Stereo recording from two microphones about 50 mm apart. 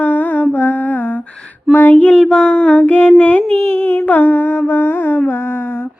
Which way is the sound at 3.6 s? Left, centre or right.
Left.